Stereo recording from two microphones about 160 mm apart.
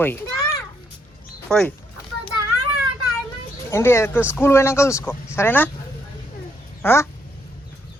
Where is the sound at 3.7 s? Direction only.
15° left (ahead or behind).